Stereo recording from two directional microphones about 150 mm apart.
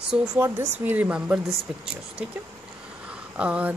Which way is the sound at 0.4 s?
15° right (ahead or behind).